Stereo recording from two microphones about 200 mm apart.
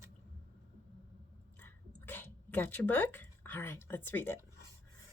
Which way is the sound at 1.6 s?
10° left (ahead or behind).